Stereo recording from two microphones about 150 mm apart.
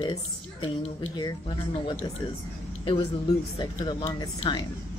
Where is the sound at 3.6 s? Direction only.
30° left (ahead or behind).